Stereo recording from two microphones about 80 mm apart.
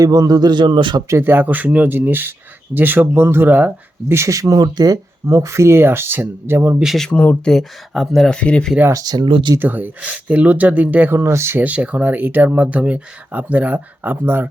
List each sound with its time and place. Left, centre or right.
0.0 s a man's voice: right
1.2 s speech: right
4.1 s speech: right
5.2 s speech: right
7.1 s speech: left
7.4 s speech: centre
8.4 s speech: centre
8.9 s speech: right
9.2 s speech: right
9.6 s speech: right
11.1 s speech: right
11.6 s speech: centre